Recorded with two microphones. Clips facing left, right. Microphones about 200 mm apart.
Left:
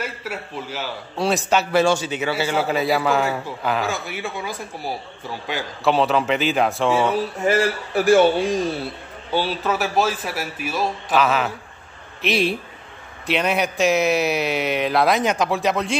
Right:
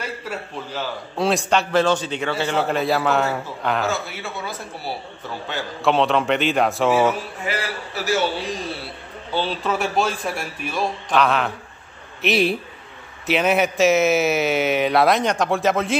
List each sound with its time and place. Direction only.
0.3 s a man's voice: 5° left (ahead or behind)
3.8 s a man's voice: 15° left (ahead or behind)
5.9 s speech: centre (ahead or behind)
7.4 s a man's voice: 45° left (ahead or behind)
9.3 s speech: 10° left (ahead or behind)